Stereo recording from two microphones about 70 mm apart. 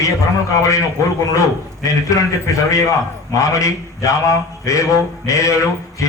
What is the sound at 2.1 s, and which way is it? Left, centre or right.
A man's voice, left.